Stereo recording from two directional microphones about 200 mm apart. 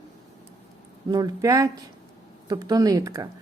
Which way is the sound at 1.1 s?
20° right (ahead or behind).